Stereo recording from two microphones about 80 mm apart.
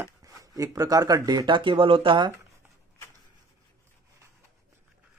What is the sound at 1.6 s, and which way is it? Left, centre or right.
Speech, right.